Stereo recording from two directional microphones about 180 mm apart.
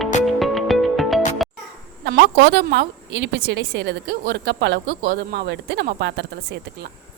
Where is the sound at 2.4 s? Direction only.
75° right (ahead or behind).